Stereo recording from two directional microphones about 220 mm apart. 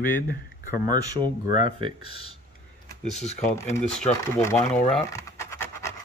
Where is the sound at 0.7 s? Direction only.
20° right (ahead or behind).